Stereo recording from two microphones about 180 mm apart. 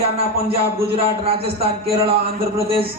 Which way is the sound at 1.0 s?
30° right (ahead or behind).